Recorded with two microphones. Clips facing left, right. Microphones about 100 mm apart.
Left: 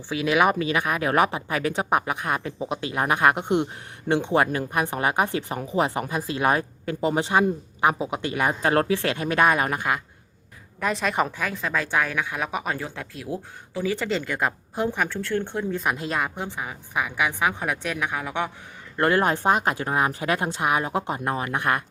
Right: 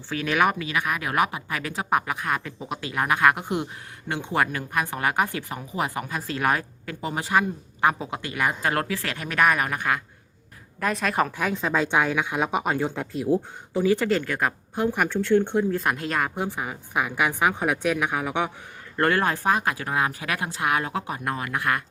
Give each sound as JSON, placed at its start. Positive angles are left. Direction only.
{"t": 0.1, "sound": "speech", "side_deg": 15}
{"t": 0.6, "sound": "speech", "side_deg": 30}
{"t": 10.8, "sound": "speech", "side_deg": 0}
{"t": 11.4, "sound": "speech", "side_deg": -20}
{"t": 13.7, "sound": "a woman's voice", "side_deg": -10}
{"t": 14.2, "sound": "speech", "side_deg": 5}
{"t": 14.9, "sound": "a woman's voice", "side_deg": -15}
{"t": 15.7, "sound": "speech", "side_deg": 5}
{"t": 16.3, "sound": "a woman's voice", "side_deg": -10}
{"t": 18.9, "sound": "speech", "side_deg": 15}